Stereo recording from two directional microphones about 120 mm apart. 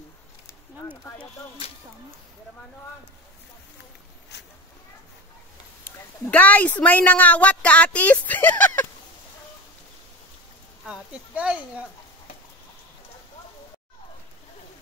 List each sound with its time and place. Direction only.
0.8 s a woman's voice: 10° left (ahead or behind)
5.9 s a woman's voice: 15° left (ahead or behind)
10.9 s speech: 10° right (ahead or behind)